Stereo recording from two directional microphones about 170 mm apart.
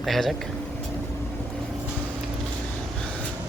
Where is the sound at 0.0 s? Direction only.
Centre (ahead or behind).